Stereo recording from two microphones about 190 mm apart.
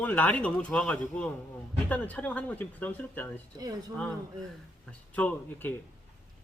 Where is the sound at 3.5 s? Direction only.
20° right (ahead or behind).